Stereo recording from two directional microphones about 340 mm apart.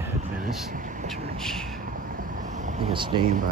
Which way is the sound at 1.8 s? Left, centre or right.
Right.